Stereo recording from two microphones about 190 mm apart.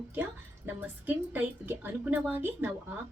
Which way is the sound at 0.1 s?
10° right (ahead or behind).